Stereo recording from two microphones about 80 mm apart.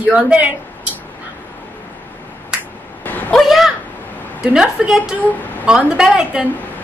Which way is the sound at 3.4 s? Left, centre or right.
Centre.